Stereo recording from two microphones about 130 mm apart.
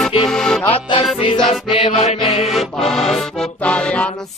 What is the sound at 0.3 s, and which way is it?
Music, 5° left (ahead or behind).